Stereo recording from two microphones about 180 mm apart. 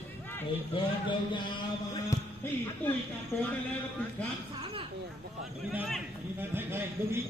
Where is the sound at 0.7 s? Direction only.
25° left (ahead or behind).